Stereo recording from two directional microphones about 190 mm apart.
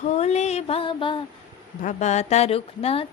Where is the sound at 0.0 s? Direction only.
35° left (ahead or behind).